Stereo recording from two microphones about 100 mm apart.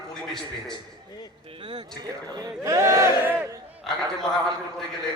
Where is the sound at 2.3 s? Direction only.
35° right (ahead or behind); by 3.4 s 20° right (ahead or behind).